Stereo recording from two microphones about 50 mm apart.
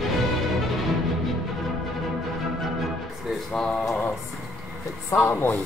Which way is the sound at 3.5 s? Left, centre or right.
Centre.